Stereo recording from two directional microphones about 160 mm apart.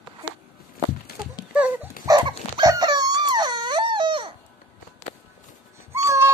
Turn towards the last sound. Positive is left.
turn(degrees=-20)  # may be behind; listen again after turning